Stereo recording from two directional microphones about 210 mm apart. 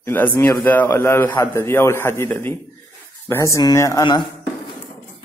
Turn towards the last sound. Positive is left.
turn(degrees=20)  # may be behind; listen again after turning